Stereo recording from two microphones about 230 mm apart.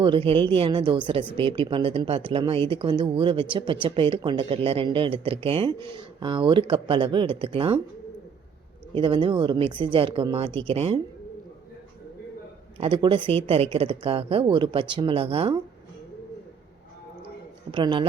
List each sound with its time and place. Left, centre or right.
0.0 s speech: right
9.0 s speech: centre
12.8 s speech: right
17.7 s speech: centre